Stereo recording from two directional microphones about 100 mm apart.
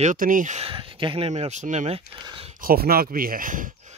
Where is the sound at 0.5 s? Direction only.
65° right (ahead or behind); by 2.0 s 90° right.